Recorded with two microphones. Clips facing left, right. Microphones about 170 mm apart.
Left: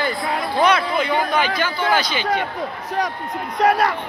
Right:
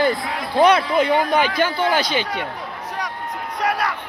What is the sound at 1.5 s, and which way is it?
Speech, 50° right (ahead or behind).